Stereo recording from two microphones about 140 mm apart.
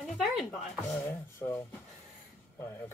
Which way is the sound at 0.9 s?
15° left (ahead or behind).